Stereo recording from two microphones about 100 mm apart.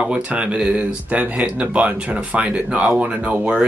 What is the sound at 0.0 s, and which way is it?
Speech, 10° right (ahead or behind).